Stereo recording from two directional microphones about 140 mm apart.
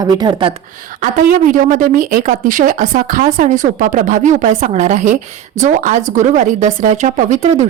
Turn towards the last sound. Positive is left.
turn(degrees=-55)  # may be behind; listen again after turning